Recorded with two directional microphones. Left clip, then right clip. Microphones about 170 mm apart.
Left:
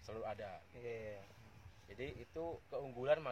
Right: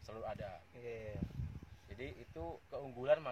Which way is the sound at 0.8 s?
10° right (ahead or behind).